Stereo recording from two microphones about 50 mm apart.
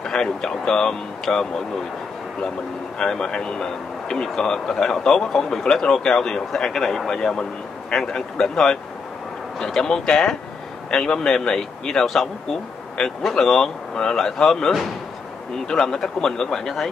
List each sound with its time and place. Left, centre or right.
0.0 s speech: centre
3.0 s speech: centre